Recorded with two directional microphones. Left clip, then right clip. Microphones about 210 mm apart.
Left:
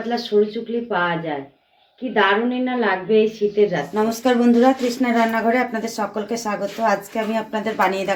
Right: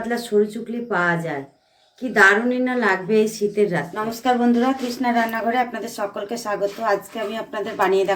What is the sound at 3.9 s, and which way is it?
Speech, 40° left (ahead or behind).